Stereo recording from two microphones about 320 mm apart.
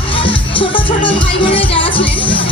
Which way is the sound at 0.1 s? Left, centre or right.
Centre.